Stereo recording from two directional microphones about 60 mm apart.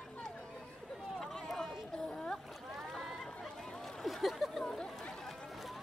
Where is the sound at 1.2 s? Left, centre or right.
Centre.